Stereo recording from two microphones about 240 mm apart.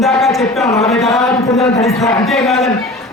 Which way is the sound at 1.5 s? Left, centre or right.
Left.